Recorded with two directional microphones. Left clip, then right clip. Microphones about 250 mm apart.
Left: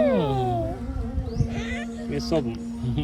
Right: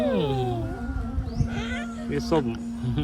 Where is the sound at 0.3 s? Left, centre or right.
Left.